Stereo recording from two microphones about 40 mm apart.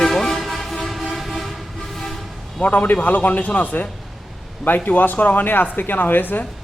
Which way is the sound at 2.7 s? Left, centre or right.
Left.